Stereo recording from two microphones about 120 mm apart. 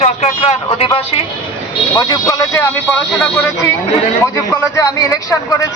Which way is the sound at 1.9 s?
35° left (ahead or behind).